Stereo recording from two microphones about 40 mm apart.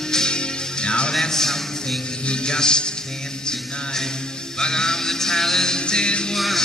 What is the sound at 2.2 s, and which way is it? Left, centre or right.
Music, centre.